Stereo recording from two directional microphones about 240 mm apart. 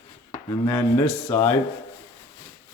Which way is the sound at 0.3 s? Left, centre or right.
Centre.